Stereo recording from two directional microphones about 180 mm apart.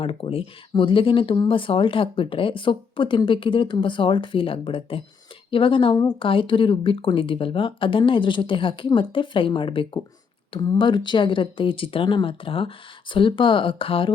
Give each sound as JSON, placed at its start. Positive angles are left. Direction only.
{"t": 0.0, "sound": "speech", "side_deg": 30}